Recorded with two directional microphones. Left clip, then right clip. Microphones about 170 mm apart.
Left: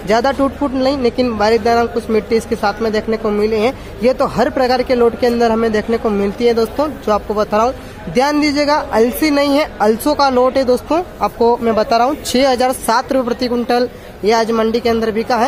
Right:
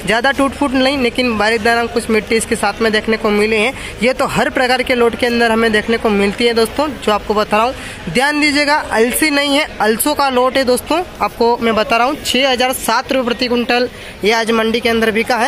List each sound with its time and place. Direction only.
0.0 s speech: centre (ahead or behind)
12.3 s speech: 10° left (ahead or behind); by 15.4 s 5° right (ahead or behind)